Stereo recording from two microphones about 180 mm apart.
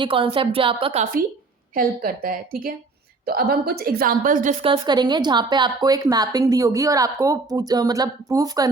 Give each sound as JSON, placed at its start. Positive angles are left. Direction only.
{"t": 0.0, "sound": "a woman's voice", "side_deg": -30}
{"t": 1.7, "sound": "a woman's voice", "side_deg": -55}
{"t": 4.6, "sound": "a woman's voice", "side_deg": -25}